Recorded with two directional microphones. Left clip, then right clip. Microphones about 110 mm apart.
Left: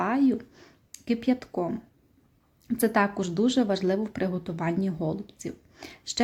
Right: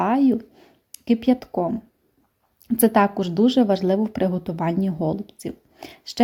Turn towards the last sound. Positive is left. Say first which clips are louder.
# even
turn(degrees=-35)  # may be behind; listen again after turning